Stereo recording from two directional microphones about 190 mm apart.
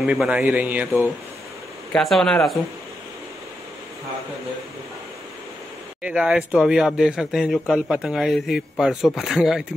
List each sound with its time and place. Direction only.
0.0 s speech: 5° right (ahead or behind)
1.9 s speech: centre (ahead or behind)
6.0 s speech: 5° right (ahead or behind)